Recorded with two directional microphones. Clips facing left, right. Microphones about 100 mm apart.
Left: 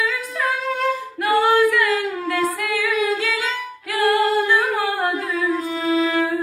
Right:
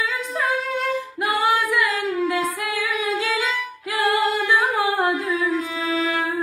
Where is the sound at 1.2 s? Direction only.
15° right (ahead or behind).